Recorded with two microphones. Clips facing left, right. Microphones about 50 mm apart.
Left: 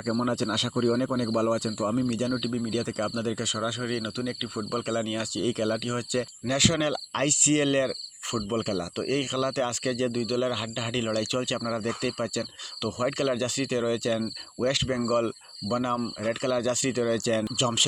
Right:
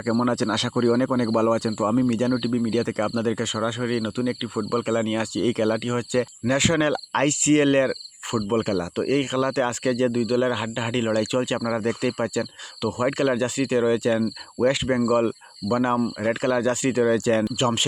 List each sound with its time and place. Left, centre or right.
0.2 s speech: right
7.1 s cricket: right
8.4 s speech: right
17.6 s cricket: right